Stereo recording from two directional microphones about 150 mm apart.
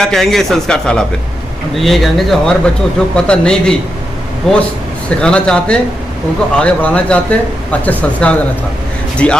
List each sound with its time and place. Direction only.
0.0 s a man's voice: 5° left (ahead or behind)